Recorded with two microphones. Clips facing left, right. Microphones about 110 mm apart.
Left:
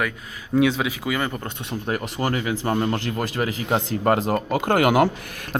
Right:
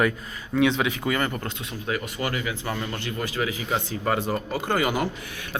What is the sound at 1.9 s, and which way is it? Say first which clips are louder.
Speech: left 3 dB; 40° left (ahead or behind).